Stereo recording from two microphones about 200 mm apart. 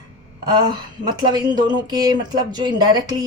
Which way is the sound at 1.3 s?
20° right (ahead or behind).